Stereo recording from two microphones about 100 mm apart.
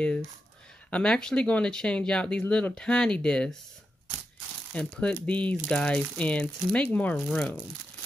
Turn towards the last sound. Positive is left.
turn(degrees=10)  # may be behind; listen again after turning